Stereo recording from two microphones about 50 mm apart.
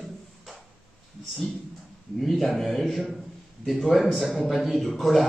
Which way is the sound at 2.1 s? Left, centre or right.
Centre.